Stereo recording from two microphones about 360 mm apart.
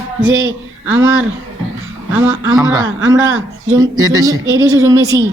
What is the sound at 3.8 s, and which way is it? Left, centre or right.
A woman's voice, centre.